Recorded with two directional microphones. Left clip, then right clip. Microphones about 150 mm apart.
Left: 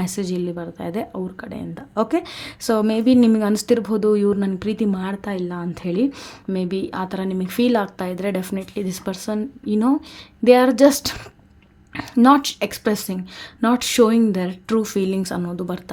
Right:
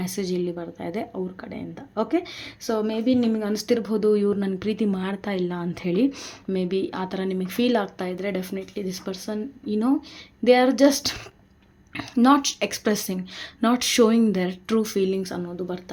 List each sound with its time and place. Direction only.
0.0 s speech: 35° left (ahead or behind)